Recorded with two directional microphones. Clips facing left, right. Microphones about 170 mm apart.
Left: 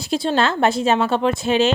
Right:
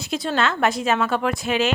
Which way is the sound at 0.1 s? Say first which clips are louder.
Left 4 dB; 30° left (ahead or behind).